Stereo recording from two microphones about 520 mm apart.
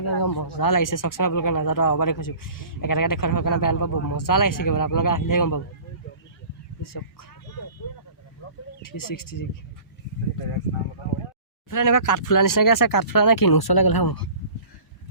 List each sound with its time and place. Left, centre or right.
0.2 s speech: left
8.8 s speech: left
11.7 s speech: left